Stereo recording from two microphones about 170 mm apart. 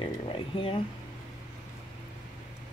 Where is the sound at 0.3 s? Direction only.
30° left (ahead or behind).